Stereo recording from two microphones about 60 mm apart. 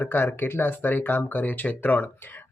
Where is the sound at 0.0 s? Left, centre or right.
Left.